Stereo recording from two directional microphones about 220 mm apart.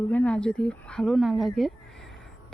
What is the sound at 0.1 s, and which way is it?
Speech, 5° left (ahead or behind).